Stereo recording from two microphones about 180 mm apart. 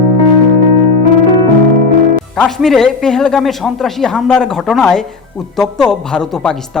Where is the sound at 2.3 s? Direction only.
Centre (ahead or behind).